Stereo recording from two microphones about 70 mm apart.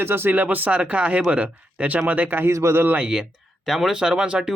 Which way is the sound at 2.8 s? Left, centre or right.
Centre.